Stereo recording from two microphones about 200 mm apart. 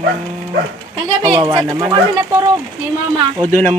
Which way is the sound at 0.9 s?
20° right (ahead or behind).